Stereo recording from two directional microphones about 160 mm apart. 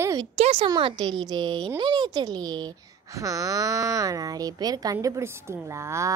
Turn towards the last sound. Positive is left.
turn(degrees=-20)  # may be behind; listen again after turning